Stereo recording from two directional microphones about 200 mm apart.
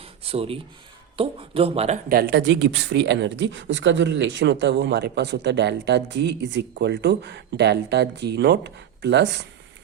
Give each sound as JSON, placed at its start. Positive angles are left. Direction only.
{"t": 0.0, "sound": "a sound", "side_deg": -30}
{"t": 1.1, "sound": "speech", "side_deg": -25}
{"t": 2.0, "sound": "speech", "side_deg": -55}